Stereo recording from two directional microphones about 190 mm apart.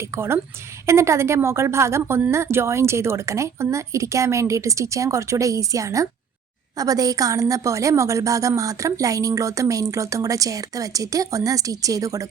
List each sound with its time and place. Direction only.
0.0 s a woman's voice: 15° right (ahead or behind)